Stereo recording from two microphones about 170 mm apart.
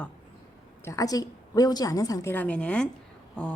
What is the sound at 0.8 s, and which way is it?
Speech, 20° left (ahead or behind).